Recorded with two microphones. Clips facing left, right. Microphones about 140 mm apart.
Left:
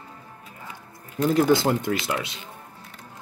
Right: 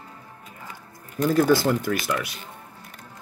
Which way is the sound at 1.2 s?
20° left (ahead or behind).